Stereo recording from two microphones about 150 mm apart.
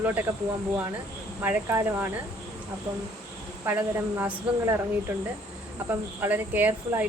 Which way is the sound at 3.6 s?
15° right (ahead or behind).